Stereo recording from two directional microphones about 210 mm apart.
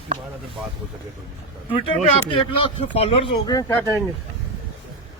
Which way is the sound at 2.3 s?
25° left (ahead or behind).